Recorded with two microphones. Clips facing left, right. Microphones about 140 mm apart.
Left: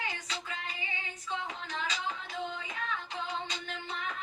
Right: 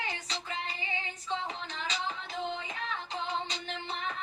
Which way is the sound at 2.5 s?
30° right (ahead or behind).